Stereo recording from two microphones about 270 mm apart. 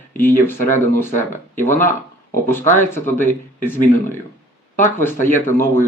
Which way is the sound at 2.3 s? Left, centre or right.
Centre.